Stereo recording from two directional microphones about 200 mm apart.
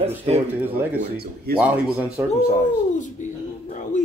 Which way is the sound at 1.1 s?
50° right (ahead or behind).